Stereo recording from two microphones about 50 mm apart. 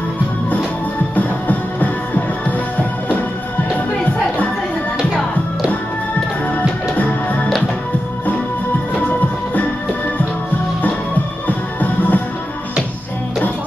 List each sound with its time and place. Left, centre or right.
1.1 s music: left
11.4 s music: left